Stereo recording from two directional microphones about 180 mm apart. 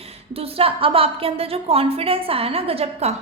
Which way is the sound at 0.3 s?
30° right (ahead or behind).